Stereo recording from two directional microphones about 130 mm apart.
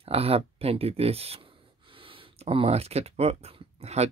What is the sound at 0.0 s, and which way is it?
Speech, 50° right (ahead or behind).